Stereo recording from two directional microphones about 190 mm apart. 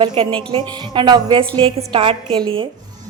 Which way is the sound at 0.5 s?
25° right (ahead or behind).